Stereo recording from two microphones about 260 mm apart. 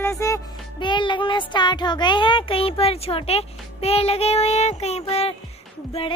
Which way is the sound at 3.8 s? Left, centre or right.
Left.